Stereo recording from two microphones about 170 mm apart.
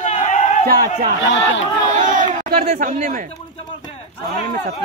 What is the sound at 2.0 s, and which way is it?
Speech, 50° right (ahead or behind).